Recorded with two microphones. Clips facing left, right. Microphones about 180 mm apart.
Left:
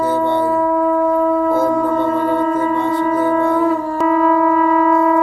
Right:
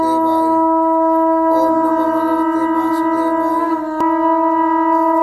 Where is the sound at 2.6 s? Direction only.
20° left (ahead or behind).